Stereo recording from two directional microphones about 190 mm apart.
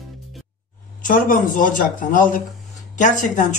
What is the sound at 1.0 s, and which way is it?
Speech, 45° left (ahead or behind).